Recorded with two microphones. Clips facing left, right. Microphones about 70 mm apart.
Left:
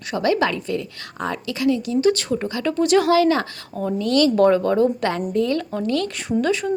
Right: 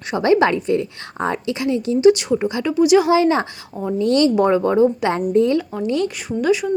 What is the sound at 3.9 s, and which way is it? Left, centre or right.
A woman's voice, right.